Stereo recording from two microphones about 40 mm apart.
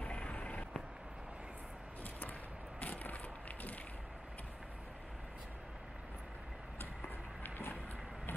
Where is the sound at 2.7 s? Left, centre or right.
Left.